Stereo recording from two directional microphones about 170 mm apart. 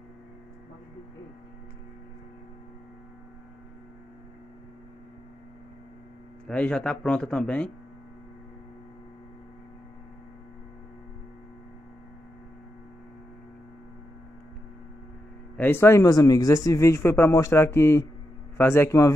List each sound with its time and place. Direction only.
6.4 s speech: 5° left (ahead or behind)
15.5 s speech: 10° left (ahead or behind)